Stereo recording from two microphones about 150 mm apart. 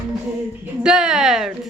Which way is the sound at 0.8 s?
5° right (ahead or behind).